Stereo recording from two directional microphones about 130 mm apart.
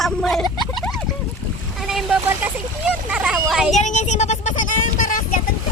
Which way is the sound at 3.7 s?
65° left (ahead or behind).